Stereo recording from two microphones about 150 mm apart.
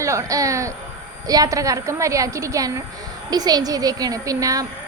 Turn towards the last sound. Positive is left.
turn(degrees=-25)  # may be behind; listen again after turning